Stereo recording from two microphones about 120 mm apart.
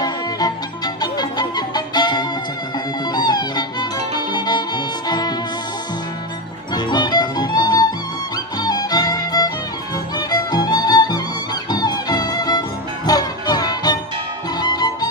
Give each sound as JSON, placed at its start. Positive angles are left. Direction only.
{"t": 0.0, "sound": "music", "side_deg": 35}
{"t": 6.7, "sound": "music", "side_deg": 35}